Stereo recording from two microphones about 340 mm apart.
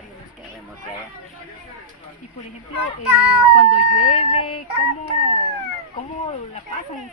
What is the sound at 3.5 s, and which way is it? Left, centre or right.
Speech, left.